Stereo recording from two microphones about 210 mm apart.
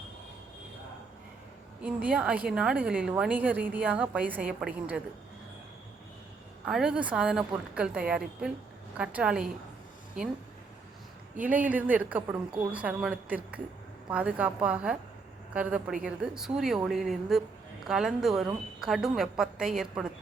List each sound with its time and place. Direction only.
1.8 s a woman's voice: 5° right (ahead or behind)
6.7 s a woman's voice: 5° right (ahead or behind)
11.3 s a woman's voice: 5° right (ahead or behind)